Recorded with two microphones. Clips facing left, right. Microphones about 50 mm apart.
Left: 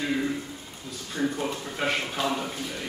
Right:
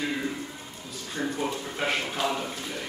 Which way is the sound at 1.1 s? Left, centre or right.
Centre.